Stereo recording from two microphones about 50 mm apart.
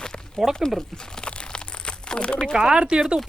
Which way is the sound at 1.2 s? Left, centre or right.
Centre.